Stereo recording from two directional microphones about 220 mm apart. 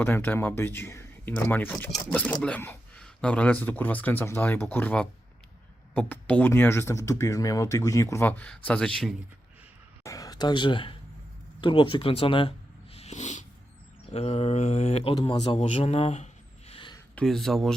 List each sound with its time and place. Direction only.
0.0 s speech: 10° left (ahead or behind)
10.0 s speech: 15° left (ahead or behind)
11.6 s a sound: 20° left (ahead or behind)
14.1 s speech: 25° left (ahead or behind)
17.2 s speech: centre (ahead or behind)